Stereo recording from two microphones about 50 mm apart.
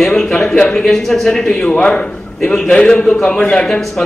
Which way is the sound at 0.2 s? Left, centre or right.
Centre.